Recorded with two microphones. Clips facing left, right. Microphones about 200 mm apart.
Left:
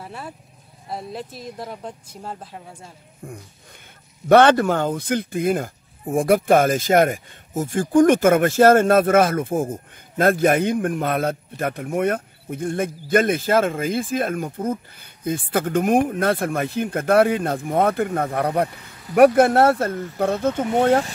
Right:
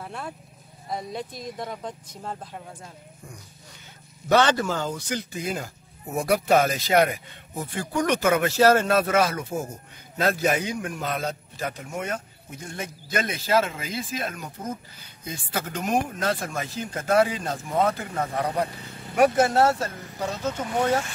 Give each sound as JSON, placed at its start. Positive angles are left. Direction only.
{"t": 0.0, "sound": "sheep", "side_deg": 5}
{"t": 0.8, "sound": "speech", "side_deg": 5}
{"t": 3.2, "sound": "speech", "side_deg": 55}